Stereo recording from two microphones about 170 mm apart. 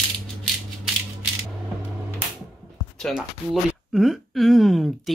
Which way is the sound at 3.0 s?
Centre (ahead or behind).